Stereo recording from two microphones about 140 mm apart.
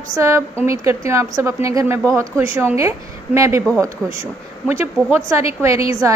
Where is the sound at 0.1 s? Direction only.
20° right (ahead or behind).